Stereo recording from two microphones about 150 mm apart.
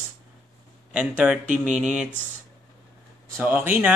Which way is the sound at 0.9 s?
10° right (ahead or behind).